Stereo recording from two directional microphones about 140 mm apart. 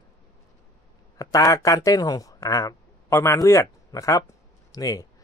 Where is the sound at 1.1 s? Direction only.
25° left (ahead or behind).